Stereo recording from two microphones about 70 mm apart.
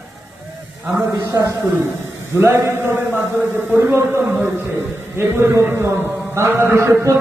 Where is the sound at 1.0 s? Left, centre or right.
Right.